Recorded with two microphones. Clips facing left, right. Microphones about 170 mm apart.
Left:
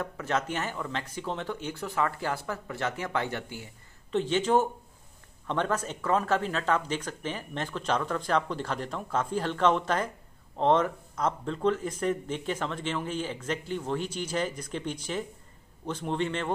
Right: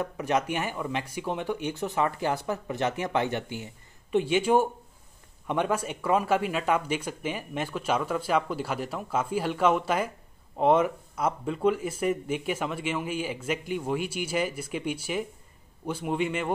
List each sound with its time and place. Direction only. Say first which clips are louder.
0.0 s speech: right 3 dB; 15° right (ahead or behind)